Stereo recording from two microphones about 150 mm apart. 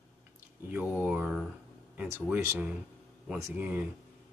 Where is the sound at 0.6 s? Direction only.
10° right (ahead or behind).